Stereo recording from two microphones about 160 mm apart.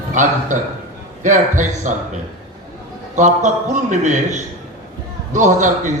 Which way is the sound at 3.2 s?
50° right (ahead or behind).